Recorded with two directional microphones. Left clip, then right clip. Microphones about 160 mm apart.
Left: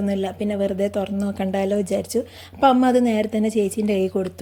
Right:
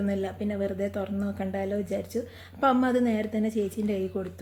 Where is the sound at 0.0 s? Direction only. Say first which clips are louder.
Left 6 dB; 35° left (ahead or behind).